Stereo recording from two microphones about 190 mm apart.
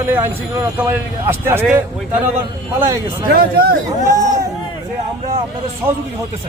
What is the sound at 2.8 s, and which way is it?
Speech, 15° right (ahead or behind).